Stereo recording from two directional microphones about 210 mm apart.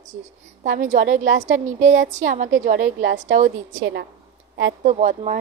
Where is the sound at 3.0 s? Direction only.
55° right (ahead or behind).